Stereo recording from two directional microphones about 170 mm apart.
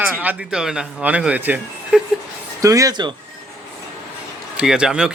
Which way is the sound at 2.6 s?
20° right (ahead or behind).